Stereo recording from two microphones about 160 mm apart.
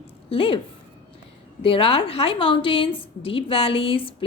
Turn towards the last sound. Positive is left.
turn(degrees=35)  # may be behind; listen again after turning